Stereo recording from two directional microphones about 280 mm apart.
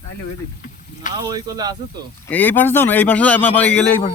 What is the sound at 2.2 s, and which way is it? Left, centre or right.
A man's voice, centre.